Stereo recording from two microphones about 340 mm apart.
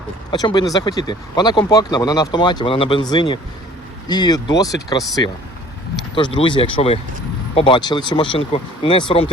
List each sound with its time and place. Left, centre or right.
0.3 s speech: centre
6.1 s speech: centre